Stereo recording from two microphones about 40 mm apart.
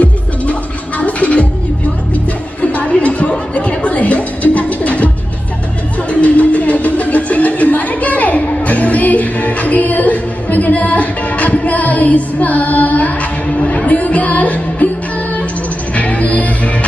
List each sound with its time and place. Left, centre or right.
0.0 s music: left
2.6 s a sound: left
3.5 s music: left
6.0 s a sound: left
13.5 s music: left
15.9 s music: left